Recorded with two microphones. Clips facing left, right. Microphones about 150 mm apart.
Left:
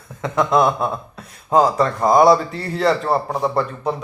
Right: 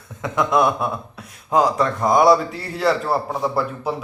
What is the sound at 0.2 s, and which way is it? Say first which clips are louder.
Speech: left 2 dB; centre (ahead or behind).